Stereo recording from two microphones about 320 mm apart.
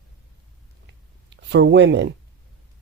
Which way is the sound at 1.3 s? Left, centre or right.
Right.